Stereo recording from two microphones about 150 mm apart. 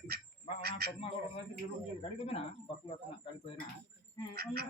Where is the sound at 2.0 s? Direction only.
40° left (ahead or behind).